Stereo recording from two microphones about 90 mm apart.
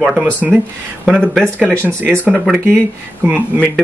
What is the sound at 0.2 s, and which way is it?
Speech, 15° right (ahead or behind).